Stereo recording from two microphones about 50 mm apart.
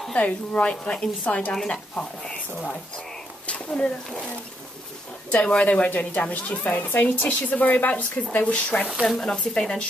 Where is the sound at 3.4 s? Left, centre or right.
Left.